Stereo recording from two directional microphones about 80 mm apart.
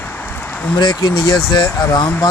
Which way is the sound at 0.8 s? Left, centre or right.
Left.